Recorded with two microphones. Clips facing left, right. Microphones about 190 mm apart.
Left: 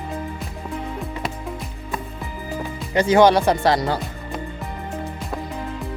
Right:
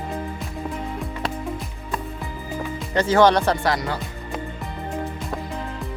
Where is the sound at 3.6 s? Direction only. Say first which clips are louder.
Left 4 dB; 30° left (ahead or behind).